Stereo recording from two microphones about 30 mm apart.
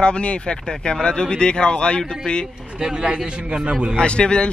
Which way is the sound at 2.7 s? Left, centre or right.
Right.